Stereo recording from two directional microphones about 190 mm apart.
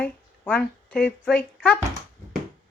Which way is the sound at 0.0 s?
5° left (ahead or behind).